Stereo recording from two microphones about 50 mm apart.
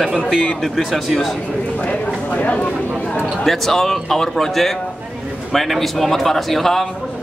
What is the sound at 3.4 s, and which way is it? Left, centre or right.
Speech, centre.